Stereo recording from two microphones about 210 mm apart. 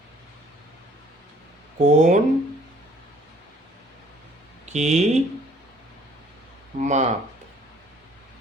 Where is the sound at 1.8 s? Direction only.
35° right (ahead or behind).